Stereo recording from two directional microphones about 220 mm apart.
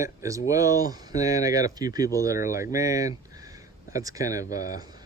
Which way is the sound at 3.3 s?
15° right (ahead or behind).